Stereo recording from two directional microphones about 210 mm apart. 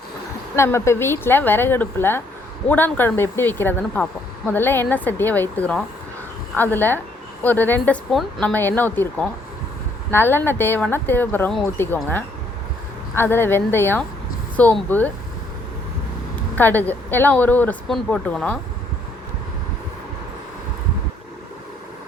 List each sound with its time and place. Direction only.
0.5 s speech: 15° left (ahead or behind)
16.6 s speech: 10° left (ahead or behind)